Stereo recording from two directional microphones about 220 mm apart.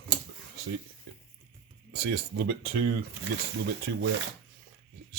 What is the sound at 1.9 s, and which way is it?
Speech, 50° right (ahead or behind).